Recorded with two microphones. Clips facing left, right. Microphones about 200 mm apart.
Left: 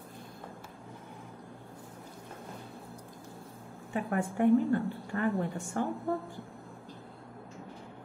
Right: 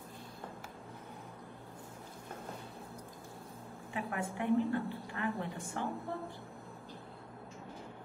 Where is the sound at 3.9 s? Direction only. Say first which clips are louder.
Left 6 dB; 45° left (ahead or behind).